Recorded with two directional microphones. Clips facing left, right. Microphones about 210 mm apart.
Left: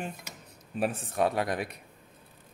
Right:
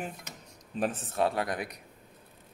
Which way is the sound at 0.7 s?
10° left (ahead or behind).